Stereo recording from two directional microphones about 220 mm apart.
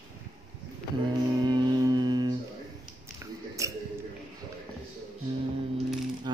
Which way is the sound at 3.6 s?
15° right (ahead or behind).